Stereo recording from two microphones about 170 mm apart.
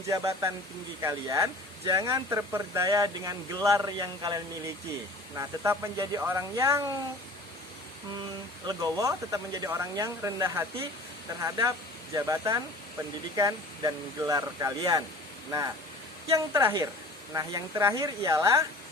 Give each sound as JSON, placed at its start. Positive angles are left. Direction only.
{"t": 0.1, "sound": "speech", "side_deg": -15}
{"t": 8.6, "sound": "speech", "side_deg": -20}
{"t": 16.3, "sound": "speech", "side_deg": -15}